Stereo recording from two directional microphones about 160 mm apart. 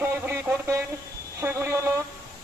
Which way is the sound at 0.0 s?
15° right (ahead or behind).